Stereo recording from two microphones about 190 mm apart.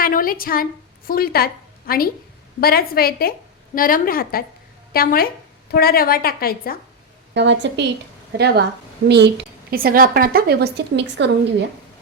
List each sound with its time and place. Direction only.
0.0 s a woman's voice: 50° left (ahead or behind)
7.3 s a woman's voice: 70° right (ahead or behind)
8.3 s speech: 60° right (ahead or behind)